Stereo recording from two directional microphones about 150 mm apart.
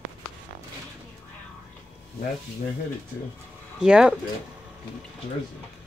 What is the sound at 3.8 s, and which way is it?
Speech, 5° right (ahead or behind).